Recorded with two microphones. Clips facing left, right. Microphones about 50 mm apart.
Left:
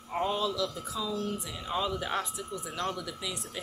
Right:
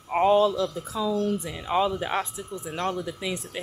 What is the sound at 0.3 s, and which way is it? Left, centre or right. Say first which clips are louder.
Speech: right 10 dB; right.